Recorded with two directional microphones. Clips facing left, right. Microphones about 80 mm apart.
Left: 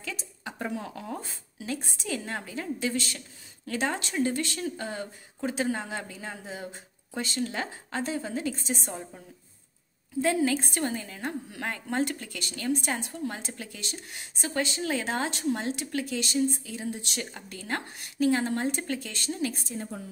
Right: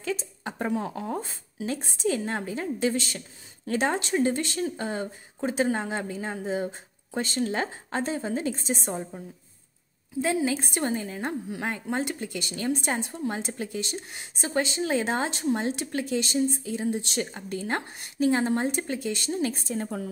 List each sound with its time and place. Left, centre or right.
0.0 s a woman's voice: right
10.2 s a woman's voice: centre
10.8 s speech: right
11.6 s speech: centre
19.7 s a woman's voice: right